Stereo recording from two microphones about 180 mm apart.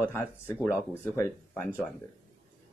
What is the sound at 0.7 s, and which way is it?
Speech, 15° left (ahead or behind).